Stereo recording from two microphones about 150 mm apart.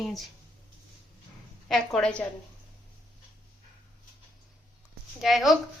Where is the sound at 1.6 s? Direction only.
5° left (ahead or behind).